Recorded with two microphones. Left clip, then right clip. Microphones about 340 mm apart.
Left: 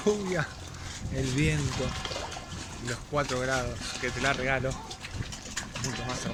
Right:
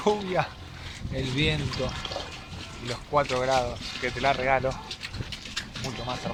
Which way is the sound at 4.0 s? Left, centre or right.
Centre.